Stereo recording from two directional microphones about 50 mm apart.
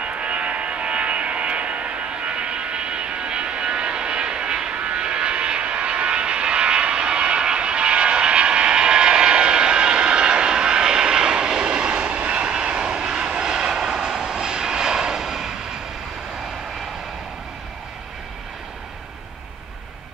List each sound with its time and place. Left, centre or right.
0.0 s vehicle: right